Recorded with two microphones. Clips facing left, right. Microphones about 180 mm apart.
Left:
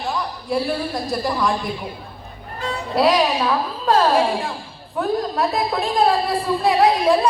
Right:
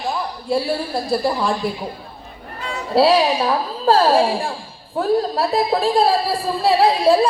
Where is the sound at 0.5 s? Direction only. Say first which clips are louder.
Right 2 dB; 30° right (ahead or behind).